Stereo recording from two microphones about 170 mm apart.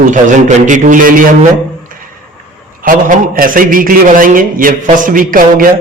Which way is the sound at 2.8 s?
55° right (ahead or behind).